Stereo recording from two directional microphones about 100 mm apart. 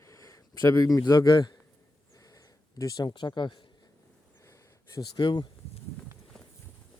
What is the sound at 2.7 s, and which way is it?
Speech, 40° left (ahead or behind).